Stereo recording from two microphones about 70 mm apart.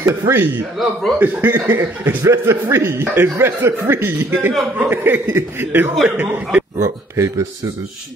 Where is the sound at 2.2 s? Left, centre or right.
Right.